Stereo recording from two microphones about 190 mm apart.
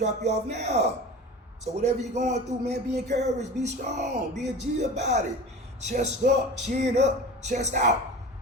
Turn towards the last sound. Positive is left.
turn(degrees=-40)  # may be behind; listen again after turning